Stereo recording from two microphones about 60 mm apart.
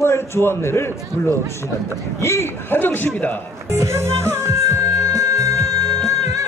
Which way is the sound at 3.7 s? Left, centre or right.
Right.